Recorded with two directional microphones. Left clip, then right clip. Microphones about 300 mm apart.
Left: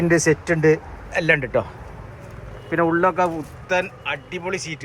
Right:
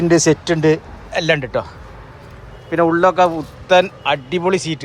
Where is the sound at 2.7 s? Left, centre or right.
Centre.